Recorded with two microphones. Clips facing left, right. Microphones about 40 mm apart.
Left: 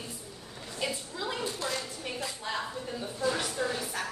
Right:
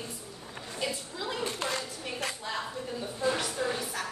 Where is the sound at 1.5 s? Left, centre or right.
Right.